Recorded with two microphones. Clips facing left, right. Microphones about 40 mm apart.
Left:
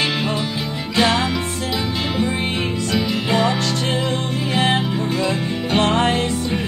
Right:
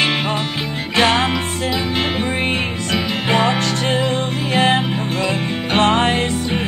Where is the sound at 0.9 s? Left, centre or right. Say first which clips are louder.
Right 2 dB; right.